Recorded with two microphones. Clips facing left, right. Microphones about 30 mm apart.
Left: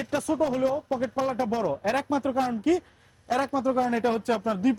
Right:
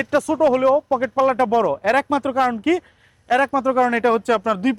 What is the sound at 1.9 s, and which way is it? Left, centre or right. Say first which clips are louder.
Speech: right 7 dB; right.